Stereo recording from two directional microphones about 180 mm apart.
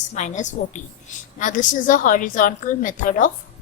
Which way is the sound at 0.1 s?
40° left (ahead or behind).